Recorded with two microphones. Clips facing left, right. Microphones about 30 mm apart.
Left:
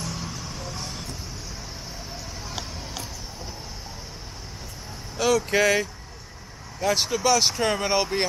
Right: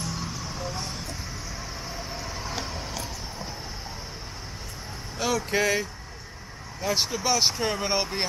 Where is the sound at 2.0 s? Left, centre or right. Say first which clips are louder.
Right 3 dB; centre.